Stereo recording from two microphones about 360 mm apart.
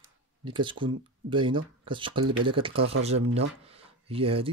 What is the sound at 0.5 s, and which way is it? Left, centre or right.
Speech, centre.